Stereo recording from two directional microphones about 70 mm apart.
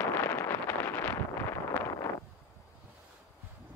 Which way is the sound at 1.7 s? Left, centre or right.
Left.